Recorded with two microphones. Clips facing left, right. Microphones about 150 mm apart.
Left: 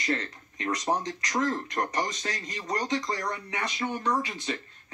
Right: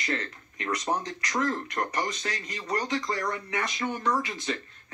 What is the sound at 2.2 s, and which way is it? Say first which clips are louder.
Speech: even; 20° left (ahead or behind).